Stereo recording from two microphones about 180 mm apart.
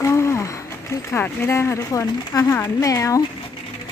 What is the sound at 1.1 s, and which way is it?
Speech, 15° left (ahead or behind).